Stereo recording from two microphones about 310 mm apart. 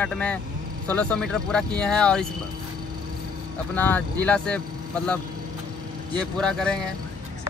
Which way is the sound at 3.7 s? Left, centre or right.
Centre.